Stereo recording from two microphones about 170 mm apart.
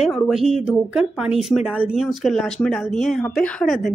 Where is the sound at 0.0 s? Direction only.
5° right (ahead or behind).